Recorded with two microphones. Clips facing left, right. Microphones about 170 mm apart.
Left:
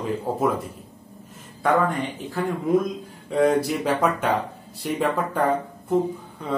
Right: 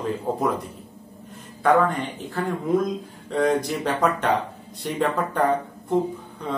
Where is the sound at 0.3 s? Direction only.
5° left (ahead or behind).